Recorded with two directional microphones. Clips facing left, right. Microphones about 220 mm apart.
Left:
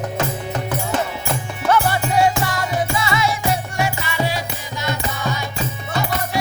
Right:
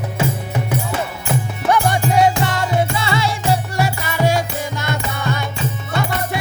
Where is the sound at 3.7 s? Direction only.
40° right (ahead or behind).